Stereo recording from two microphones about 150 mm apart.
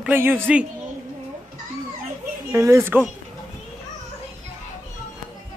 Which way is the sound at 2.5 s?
20° right (ahead or behind).